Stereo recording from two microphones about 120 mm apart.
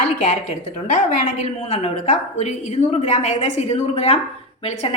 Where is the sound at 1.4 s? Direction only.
60° left (ahead or behind).